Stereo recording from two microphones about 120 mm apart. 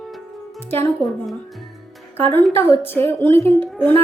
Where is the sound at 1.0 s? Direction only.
Centre (ahead or behind).